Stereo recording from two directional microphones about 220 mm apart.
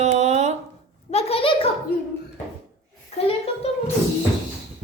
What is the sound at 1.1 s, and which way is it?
Speech, 30° left (ahead or behind).